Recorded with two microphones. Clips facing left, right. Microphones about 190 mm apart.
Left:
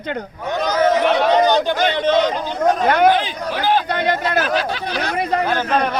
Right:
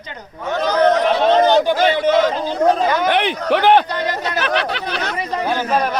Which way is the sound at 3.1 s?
65° right (ahead or behind).